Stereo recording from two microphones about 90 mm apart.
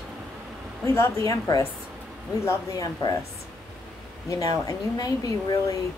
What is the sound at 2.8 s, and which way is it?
Speech, 40° left (ahead or behind).